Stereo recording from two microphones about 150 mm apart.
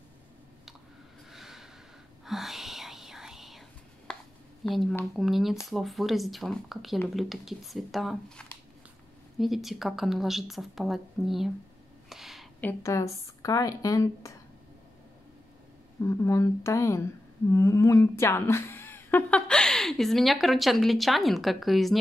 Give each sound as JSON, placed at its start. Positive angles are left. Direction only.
{"t": 1.3, "sound": "snort", "side_deg": 0}
{"t": 2.2, "sound": "whispering", "side_deg": 0}
{"t": 4.1, "sound": "a sound", "side_deg": 5}
{"t": 4.6, "sound": "a woman's voice", "side_deg": 0}
{"t": 12.1, "sound": "a sound", "side_deg": 0}
{"t": 12.5, "sound": "speech", "side_deg": 15}
{"t": 16.0, "sound": "speech", "side_deg": 15}